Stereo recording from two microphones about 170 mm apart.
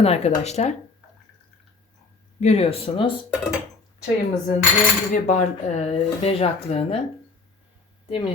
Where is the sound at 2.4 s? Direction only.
35° left (ahead or behind).